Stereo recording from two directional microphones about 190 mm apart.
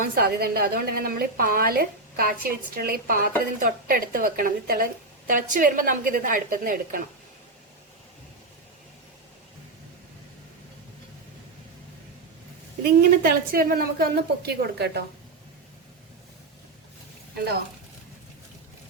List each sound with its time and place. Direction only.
0.0 s a woman's voice: 50° right (ahead or behind)
12.8 s a woman's voice: 55° right (ahead or behind)